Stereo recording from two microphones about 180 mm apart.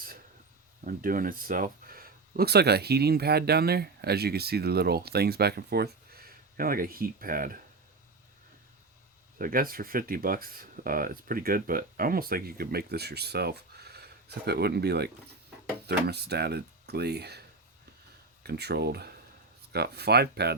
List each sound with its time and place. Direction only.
0.9 s speech: 50° right (ahead or behind)
9.4 s speech: 55° right (ahead or behind)
18.4 s speech: 65° right (ahead or behind)